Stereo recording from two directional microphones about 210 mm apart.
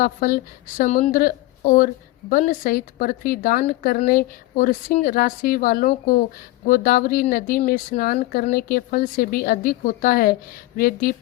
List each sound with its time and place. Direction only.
0.0 s a woman's voice: 40° left (ahead or behind)